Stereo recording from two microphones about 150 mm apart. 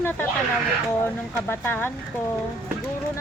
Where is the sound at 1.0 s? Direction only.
15° left (ahead or behind).